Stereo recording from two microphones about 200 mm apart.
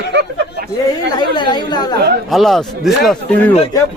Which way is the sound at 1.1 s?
20° left (ahead or behind).